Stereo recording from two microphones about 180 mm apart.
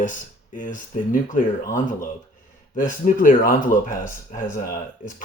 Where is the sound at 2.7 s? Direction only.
45° left (ahead or behind).